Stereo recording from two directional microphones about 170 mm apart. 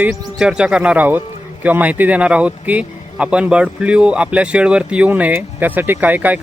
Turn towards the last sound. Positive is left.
turn(degrees=-10)  # may be behind; listen again after turning